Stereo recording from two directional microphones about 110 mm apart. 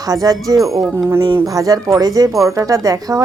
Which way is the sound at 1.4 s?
30° right (ahead or behind).